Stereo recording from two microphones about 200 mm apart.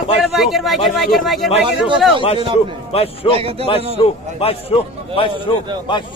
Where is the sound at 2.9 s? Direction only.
30° left (ahead or behind).